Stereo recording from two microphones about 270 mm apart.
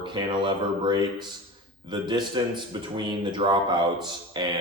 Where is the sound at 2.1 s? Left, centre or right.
Centre.